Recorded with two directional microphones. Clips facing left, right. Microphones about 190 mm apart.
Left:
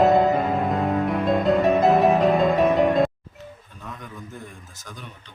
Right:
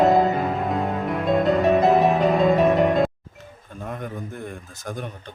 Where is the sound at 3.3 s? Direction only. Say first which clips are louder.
Right 1 dB; 50° right (ahead or behind).